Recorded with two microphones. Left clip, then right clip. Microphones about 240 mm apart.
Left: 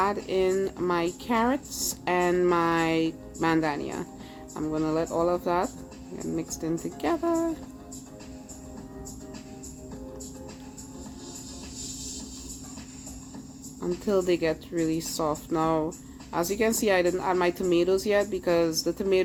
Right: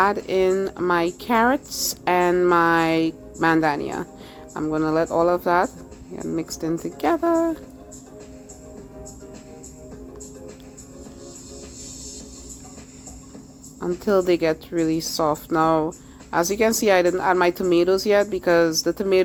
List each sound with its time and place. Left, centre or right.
0.0 s a woman's voice: right
13.7 s a woman's voice: centre